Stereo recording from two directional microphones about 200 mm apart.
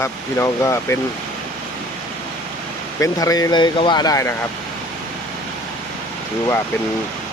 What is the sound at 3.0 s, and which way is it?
Speech, 15° left (ahead or behind).